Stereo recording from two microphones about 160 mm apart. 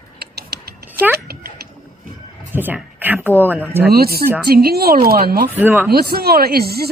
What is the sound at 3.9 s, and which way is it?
A woman's voice, 75° right (ahead or behind).